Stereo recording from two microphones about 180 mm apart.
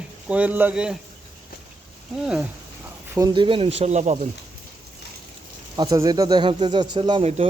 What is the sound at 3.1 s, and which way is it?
A man's voice, 20° right (ahead or behind).